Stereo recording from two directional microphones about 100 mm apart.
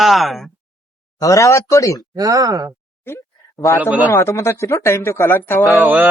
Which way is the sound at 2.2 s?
35° right (ahead or behind).